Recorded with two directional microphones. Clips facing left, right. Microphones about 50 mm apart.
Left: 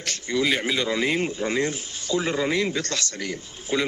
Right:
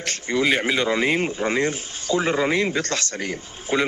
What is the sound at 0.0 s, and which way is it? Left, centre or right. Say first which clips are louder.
Speech: right 3 dB; right.